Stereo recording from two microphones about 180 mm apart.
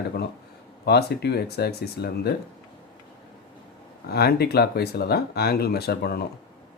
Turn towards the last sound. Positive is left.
turn(degrees=60)  # may be behind; listen again after turning